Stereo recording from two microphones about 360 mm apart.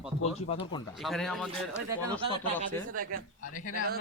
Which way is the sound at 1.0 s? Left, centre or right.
Centre.